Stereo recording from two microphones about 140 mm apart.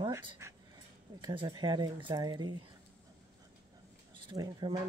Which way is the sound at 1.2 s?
35° right (ahead or behind).